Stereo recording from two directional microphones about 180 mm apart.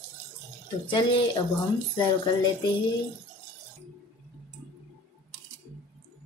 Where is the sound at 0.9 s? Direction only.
25° left (ahead or behind).